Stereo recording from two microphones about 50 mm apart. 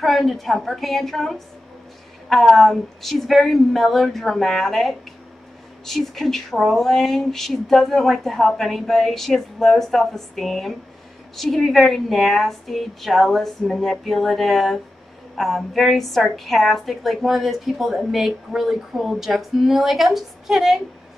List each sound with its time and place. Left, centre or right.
0.0 s a woman's voice: centre